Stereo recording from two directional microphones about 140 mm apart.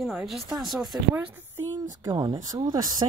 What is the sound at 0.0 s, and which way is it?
Speech, centre (ahead or behind).